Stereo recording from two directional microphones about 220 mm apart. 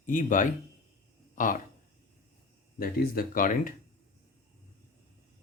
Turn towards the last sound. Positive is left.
turn(degrees=40)  # may be behind; listen again after turning